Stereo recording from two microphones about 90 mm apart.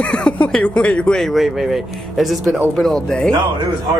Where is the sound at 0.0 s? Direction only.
10° left (ahead or behind).